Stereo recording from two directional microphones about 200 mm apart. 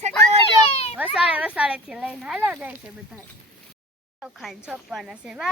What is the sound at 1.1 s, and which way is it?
Speech, 5° right (ahead or behind).